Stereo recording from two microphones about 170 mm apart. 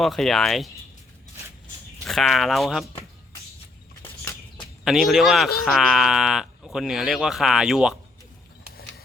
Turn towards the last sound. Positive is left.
turn(degrees=0)  # may be behind; listen again after turning